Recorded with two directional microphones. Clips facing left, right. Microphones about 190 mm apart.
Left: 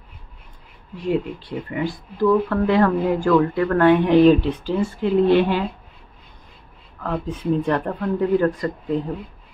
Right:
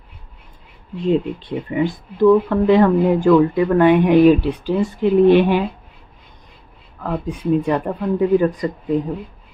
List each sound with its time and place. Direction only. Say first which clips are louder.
0.9 s speech: right 4 dB; 25° right (ahead or behind)
7.0 s speech: right 2 dB; 15° right (ahead or behind)